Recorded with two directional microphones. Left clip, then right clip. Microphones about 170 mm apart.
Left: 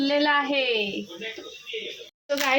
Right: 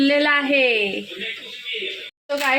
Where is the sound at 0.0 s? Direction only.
40° right (ahead or behind).